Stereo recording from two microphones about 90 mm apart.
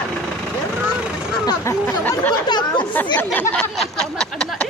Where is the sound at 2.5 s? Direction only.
55° left (ahead or behind).